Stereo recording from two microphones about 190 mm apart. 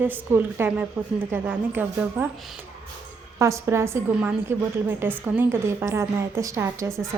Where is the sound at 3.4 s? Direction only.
15° right (ahead or behind).